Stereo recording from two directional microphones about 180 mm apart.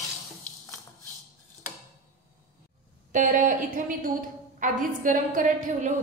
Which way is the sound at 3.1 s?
45° right (ahead or behind).